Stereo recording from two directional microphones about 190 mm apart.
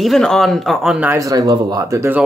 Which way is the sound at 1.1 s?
15° right (ahead or behind).